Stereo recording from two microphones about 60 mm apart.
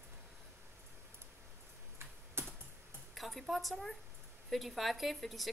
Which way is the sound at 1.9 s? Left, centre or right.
Right.